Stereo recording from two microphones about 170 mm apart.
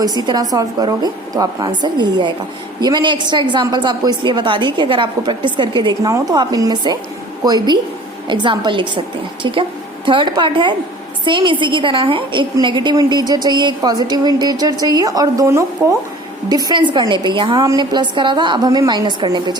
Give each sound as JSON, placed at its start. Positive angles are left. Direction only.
{"t": 0.0, "sound": "a woman's voice", "side_deg": -25}